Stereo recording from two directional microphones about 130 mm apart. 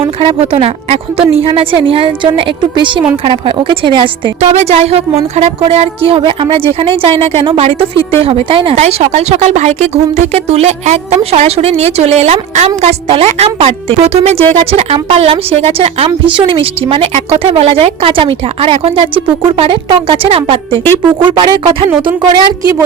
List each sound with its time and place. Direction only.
0.2 s a woman's voice: 50° right (ahead or behind)
4.4 s a woman's voice: 55° right (ahead or behind)
8.7 s a woman's voice: 55° right (ahead or behind); by 22.4 s 35° right (ahead or behind)